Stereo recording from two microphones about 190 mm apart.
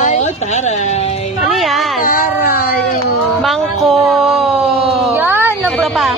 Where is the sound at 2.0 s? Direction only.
50° left (ahead or behind).